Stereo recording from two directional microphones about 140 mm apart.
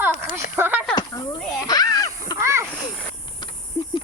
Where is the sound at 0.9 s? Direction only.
30° left (ahead or behind).